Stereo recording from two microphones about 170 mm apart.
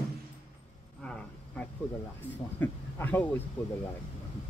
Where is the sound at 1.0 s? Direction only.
5° left (ahead or behind).